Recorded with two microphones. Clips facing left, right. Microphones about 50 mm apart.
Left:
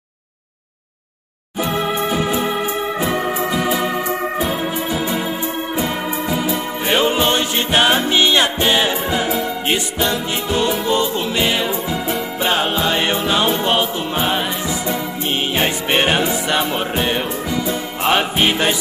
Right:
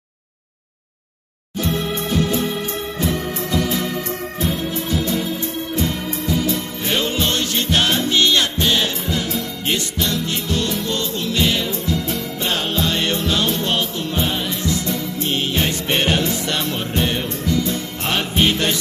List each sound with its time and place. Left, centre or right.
1.6 s music: centre
3.0 s organ: centre
4.5 s music: centre